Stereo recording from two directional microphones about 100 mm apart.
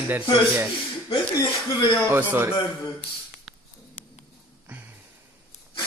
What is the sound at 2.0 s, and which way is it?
Speech, 25° right (ahead or behind).